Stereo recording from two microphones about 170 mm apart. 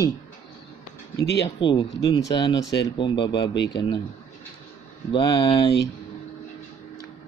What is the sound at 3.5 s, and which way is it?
Speech, 90° left.